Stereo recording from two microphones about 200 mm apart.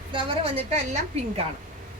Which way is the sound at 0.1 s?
25° right (ahead or behind).